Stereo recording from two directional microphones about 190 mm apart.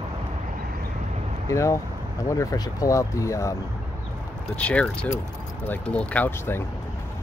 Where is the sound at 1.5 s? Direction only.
15° left (ahead or behind).